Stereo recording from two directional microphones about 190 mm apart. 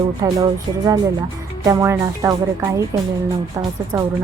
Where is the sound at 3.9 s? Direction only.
15° right (ahead or behind).